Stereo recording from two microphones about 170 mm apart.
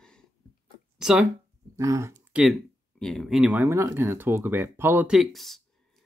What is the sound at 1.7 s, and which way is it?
Speech, 20° right (ahead or behind).